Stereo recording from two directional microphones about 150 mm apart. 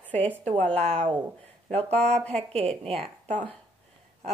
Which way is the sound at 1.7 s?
45° right (ahead or behind).